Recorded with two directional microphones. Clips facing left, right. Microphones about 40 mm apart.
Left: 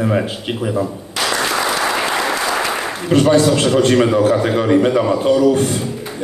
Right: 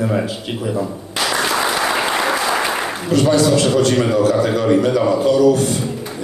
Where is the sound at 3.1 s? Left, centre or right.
Left.